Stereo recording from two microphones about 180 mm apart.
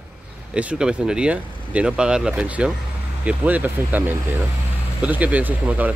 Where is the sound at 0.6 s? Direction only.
5° right (ahead or behind).